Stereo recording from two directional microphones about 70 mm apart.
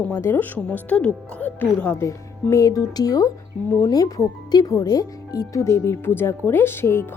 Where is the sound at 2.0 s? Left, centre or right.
Left.